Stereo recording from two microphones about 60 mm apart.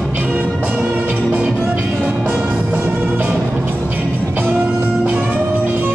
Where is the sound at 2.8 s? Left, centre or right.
Right.